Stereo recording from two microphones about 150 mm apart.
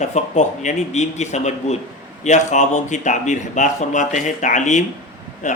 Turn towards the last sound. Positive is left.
turn(degrees=55)  # may be behind; listen again after turning